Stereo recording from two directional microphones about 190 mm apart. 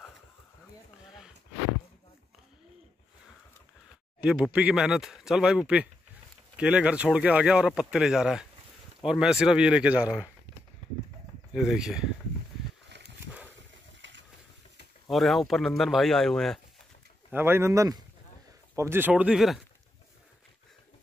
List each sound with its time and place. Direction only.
1.0 s a sound: centre (ahead or behind)
4.2 s speech: 5° right (ahead or behind)
11.5 s speech: 5° right (ahead or behind)
12.9 s a sound: 65° right (ahead or behind)
14.0 s ratchet: 75° right (ahead or behind)
15.0 s speech: centre (ahead or behind)
17.3 s speech: 10° right (ahead or behind)